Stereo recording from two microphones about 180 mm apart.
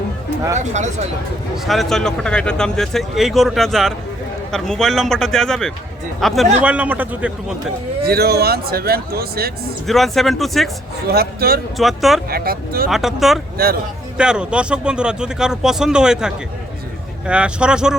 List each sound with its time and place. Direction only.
0.5 s speech: 40° right (ahead or behind)
1.5 s a man's voice: centre (ahead or behind)
8.0 s speech: 60° right (ahead or behind)
9.8 s speech: centre (ahead or behind)
11.1 s speech: 60° right (ahead or behind)
11.8 s speech: centre (ahead or behind)
12.3 s speech: 55° right (ahead or behind)
12.9 s speech: centre (ahead or behind)